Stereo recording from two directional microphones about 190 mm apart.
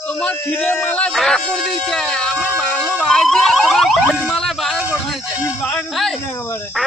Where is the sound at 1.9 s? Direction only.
Centre (ahead or behind).